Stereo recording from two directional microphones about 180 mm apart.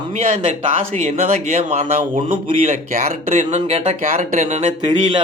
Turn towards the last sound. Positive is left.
turn(degrees=-40)  # may be behind; listen again after turning